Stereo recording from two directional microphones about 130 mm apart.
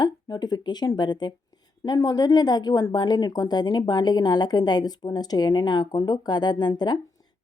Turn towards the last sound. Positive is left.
turn(degrees=35)  # may be behind; listen again after turning